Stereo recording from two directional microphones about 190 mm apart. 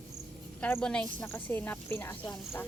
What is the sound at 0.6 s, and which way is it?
A woman's voice, 10° left (ahead or behind).